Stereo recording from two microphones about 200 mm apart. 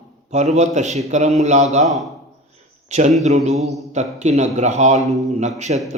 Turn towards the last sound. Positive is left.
turn(degrees=-35)  # may be behind; listen again after turning